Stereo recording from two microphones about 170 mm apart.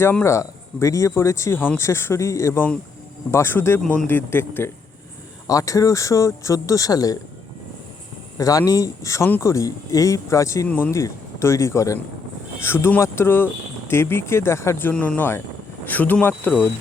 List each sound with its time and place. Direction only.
0.0 s speech: 15° left (ahead or behind)
8.4 s speech: 20° left (ahead or behind)